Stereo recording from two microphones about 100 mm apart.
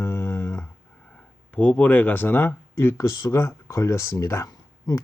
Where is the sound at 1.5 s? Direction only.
15° left (ahead or behind).